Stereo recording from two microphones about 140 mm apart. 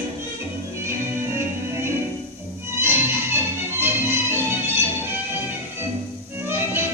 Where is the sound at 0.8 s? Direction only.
20° right (ahead or behind).